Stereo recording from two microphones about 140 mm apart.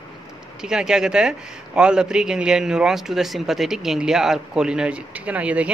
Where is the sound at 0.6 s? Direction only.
5° right (ahead or behind).